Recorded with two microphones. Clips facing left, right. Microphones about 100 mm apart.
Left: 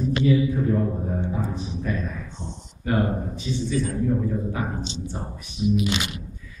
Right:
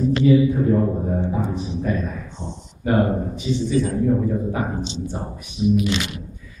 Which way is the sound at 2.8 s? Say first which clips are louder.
Right 5 dB; 25° right (ahead or behind).